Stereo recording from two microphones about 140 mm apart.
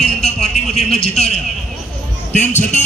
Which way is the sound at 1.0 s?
50° left (ahead or behind).